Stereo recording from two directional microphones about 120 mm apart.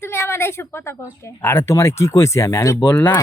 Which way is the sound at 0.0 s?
20° left (ahead or behind).